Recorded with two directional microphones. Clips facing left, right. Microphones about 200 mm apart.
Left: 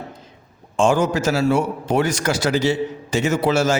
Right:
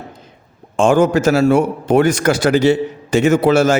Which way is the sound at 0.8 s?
55° right (ahead or behind).